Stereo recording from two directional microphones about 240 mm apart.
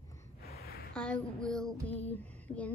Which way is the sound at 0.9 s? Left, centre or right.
Centre.